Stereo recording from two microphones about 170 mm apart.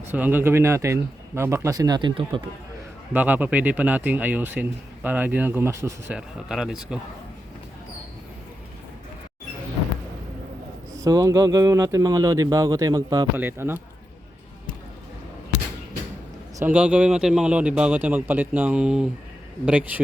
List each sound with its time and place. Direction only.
0.1 s a man's voice: 10° right (ahead or behind); by 2.4 s 30° right (ahead or behind)
3.1 s speech: 10° right (ahead or behind)
6.1 s speech: centre (ahead or behind)
10.9 s a man's voice: 20° right (ahead or behind)
16.6 s speech: 10° right (ahead or behind)